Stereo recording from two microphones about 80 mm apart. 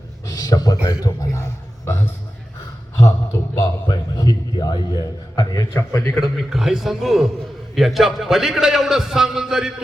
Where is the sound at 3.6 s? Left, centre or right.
Left.